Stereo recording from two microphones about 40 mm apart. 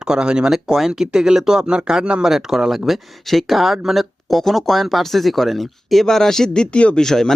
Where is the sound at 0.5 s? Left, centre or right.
Centre.